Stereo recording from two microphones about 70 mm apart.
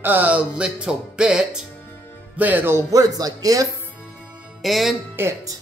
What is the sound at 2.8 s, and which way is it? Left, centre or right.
Speech, right.